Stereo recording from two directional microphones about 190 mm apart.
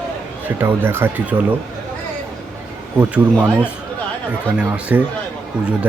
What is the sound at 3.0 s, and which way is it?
Speech, 5° right (ahead or behind).